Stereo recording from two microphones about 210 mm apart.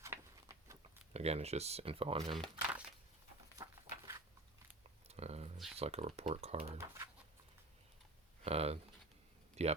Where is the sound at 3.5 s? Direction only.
15° right (ahead or behind).